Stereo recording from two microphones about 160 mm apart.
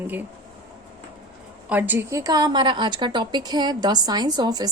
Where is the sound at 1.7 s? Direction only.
10° right (ahead or behind).